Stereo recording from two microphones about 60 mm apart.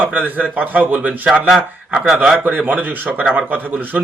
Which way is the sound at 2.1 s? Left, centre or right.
Right.